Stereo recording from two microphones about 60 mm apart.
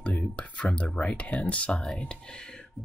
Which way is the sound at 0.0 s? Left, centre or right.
Left.